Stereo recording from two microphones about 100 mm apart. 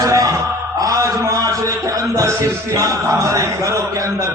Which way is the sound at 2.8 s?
35° right (ahead or behind).